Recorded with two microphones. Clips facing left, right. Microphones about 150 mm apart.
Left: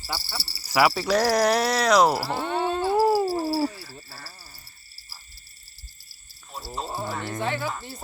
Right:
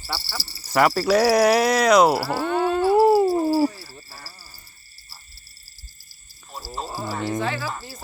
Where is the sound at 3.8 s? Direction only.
20° right (ahead or behind).